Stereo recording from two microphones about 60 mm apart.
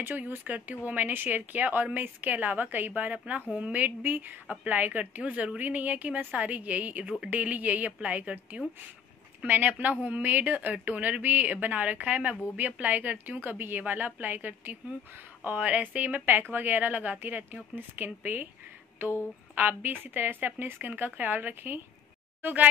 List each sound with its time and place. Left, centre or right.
0.4 s a woman's voice: right